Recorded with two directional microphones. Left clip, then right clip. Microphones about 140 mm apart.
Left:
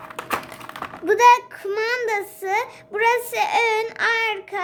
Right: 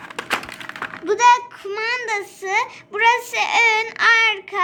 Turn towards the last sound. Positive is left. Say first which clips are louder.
# right 6 dB
turn(degrees=40)  # may be behind; listen again after turning